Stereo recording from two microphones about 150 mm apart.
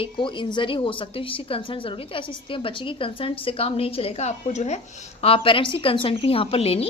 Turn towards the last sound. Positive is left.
turn(degrees=40)  # may be behind; listen again after turning